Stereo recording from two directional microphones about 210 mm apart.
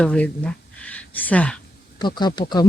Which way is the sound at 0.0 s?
5° left (ahead or behind).